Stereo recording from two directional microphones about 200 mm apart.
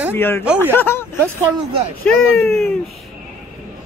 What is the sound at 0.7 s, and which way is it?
Speech, 10° left (ahead or behind).